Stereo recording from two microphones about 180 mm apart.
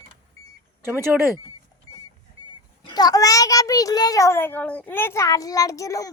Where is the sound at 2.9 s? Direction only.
20° left (ahead or behind).